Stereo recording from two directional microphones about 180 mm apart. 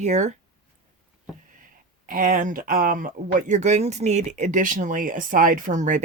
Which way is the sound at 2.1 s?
50° right (ahead or behind).